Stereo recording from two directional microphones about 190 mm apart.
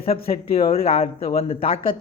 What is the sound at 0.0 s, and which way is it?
Speech, 30° left (ahead or behind).